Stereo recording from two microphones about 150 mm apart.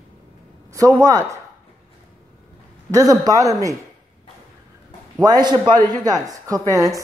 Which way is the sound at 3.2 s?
20° right (ahead or behind).